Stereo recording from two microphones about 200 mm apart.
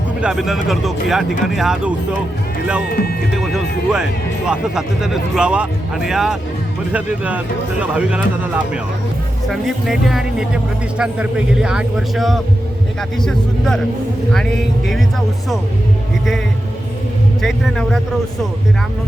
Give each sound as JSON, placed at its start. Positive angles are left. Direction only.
{"t": 0.2, "sound": "speech", "side_deg": 0}
{"t": 2.9, "sound": "speech", "side_deg": 50}
{"t": 3.3, "sound": "speech", "side_deg": 0}
{"t": 17.4, "sound": "speech", "side_deg": 0}